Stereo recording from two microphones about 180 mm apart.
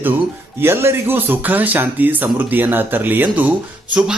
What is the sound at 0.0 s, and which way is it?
Speech, 10° right (ahead or behind).